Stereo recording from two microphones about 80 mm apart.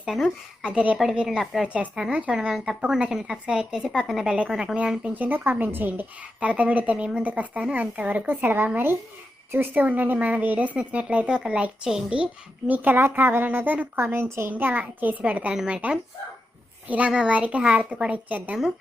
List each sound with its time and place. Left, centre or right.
0.0 s a woman's voice: centre